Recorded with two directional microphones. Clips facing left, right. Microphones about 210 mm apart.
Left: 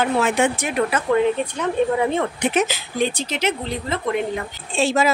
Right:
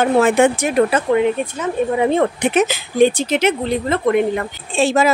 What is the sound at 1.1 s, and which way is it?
Speech, 15° right (ahead or behind).